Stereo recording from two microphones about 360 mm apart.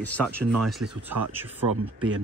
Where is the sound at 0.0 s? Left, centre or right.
Centre.